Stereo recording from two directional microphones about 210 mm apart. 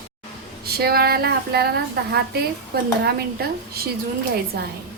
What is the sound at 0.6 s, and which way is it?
A woman's voice, 45° right (ahead or behind).